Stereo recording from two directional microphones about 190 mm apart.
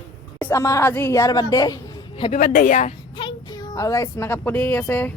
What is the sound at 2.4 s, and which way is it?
Speech, 45° left (ahead or behind).